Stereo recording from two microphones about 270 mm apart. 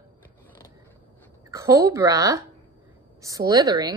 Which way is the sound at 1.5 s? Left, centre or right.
Centre.